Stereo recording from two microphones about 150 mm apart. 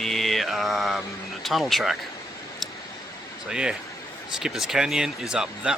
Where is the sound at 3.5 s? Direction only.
5° right (ahead or behind).